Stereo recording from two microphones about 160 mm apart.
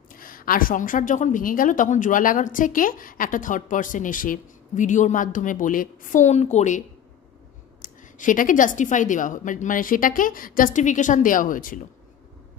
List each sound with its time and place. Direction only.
0.2 s a woman's voice: 60° left (ahead or behind); by 6.8 s 45° left (ahead or behind)
7.8 s a woman's voice: 55° left (ahead or behind)